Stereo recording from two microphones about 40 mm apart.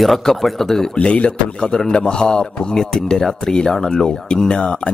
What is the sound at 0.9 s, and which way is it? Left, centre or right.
A man's voice, left.